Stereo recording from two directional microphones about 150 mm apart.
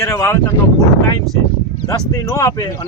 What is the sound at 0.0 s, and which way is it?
Speech, 20° left (ahead or behind).